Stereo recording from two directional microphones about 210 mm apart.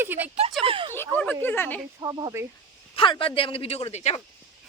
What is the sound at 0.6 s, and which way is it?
Speech, 25° right (ahead or behind).